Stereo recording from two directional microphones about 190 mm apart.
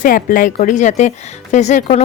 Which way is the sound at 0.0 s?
45° left (ahead or behind).